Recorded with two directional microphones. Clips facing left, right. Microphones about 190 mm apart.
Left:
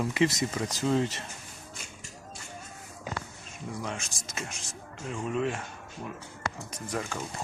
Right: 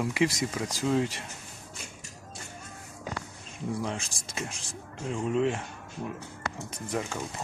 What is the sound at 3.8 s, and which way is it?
Speech, 30° right (ahead or behind).